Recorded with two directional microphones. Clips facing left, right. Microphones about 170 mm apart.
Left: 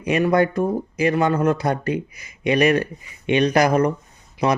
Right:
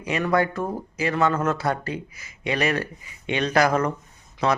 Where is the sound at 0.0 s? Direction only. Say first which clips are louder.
Left 5 dB; 20° left (ahead or behind).